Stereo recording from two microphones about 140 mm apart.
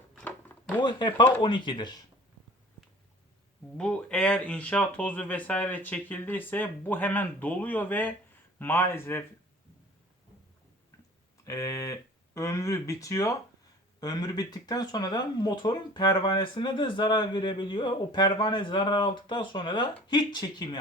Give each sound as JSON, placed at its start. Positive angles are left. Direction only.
{"t": 0.8, "sound": "speech", "side_deg": 35}
{"t": 3.8, "sound": "speech", "side_deg": 10}
{"t": 11.4, "sound": "speech", "side_deg": 25}